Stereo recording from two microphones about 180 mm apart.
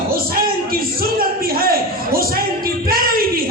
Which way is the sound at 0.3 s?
55° right (ahead or behind).